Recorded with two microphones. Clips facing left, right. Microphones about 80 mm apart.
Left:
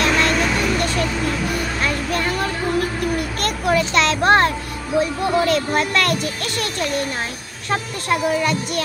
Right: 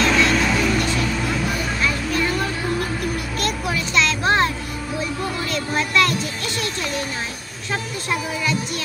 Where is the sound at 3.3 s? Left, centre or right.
Left.